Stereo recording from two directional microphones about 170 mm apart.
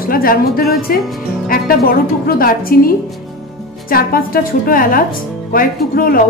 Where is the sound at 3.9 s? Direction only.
60° left (ahead or behind).